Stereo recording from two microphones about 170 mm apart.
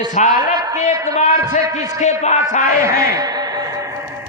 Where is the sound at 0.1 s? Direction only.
50° left (ahead or behind).